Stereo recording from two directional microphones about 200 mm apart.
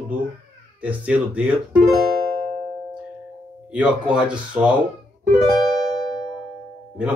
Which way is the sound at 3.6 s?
5° right (ahead or behind).